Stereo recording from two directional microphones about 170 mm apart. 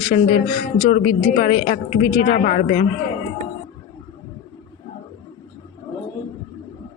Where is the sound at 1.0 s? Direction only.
50° left (ahead or behind).